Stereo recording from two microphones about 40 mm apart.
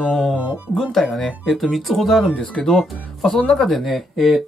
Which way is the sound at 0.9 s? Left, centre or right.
Centre.